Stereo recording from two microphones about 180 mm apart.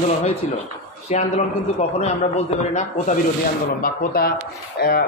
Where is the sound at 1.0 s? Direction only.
35° left (ahead or behind).